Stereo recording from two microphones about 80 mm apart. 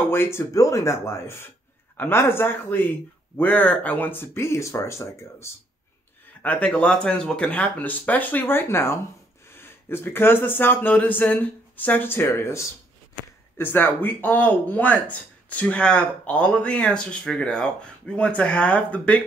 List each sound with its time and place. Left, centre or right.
0.1 s speech: left
6.4 s speech: centre